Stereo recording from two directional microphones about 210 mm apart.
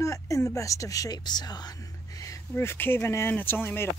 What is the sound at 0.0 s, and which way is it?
Speech, 15° left (ahead or behind).